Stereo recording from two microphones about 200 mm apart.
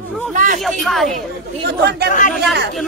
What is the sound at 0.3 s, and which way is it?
Speech, 40° right (ahead or behind).